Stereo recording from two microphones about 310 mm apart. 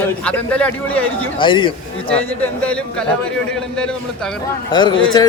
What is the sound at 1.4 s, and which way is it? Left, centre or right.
Speech, centre.